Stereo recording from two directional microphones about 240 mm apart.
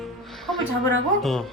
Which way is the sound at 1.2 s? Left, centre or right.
Centre.